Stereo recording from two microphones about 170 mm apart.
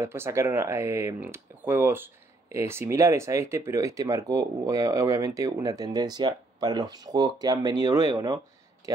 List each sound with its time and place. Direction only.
0.0 s speech: 15° right (ahead or behind)